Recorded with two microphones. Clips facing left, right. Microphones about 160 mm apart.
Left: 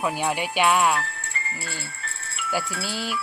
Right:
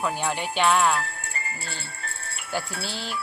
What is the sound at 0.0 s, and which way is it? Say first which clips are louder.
Speech: left 2 dB; 10° left (ahead or behind).